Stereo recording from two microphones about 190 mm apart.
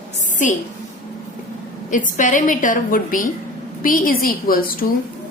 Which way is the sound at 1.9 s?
45° left (ahead or behind).